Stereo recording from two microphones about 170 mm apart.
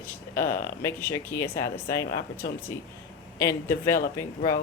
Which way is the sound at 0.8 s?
15° left (ahead or behind).